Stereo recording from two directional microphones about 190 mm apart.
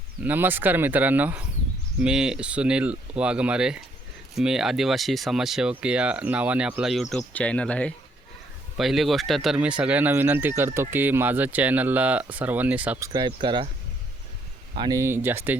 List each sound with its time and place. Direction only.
0.2 s speech: 10° right (ahead or behind)
13.1 s speech: 25° right (ahead or behind)
14.8 s speech: 20° right (ahead or behind)